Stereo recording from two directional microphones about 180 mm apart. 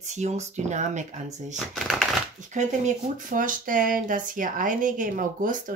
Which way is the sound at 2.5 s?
45° right (ahead or behind).